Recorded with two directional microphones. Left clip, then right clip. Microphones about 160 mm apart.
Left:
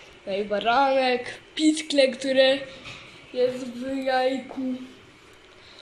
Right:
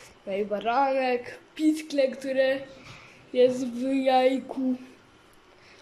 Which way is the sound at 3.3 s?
20° right (ahead or behind).